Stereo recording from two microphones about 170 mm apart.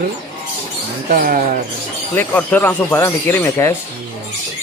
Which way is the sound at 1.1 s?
55° right (ahead or behind).